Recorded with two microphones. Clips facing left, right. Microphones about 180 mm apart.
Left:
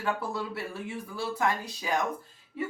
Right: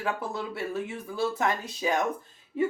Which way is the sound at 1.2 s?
20° right (ahead or behind).